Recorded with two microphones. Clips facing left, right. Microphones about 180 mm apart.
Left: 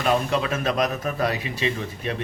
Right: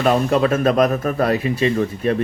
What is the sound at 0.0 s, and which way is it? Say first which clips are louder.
Speech: right 6 dB; 50° right (ahead or behind).